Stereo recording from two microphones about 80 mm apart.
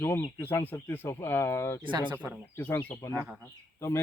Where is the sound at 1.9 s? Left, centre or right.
Right.